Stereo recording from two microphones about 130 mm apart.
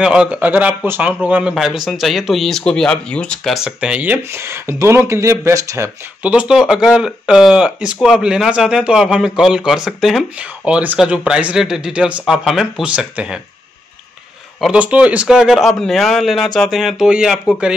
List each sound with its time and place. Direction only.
0.0 s speech: 5° right (ahead or behind)
3.5 s speech: 5° right (ahead or behind); by 5.9 s 25° right (ahead or behind)
6.2 s speech: 10° right (ahead or behind)
14.6 s speech: 10° right (ahead or behind)